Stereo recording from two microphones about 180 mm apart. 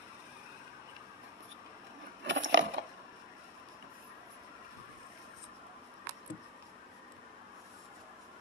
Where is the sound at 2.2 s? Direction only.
90° right.